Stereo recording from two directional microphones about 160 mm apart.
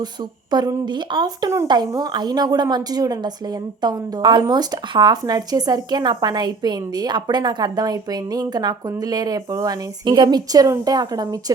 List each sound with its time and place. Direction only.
0.5 s speech: 25° right (ahead or behind)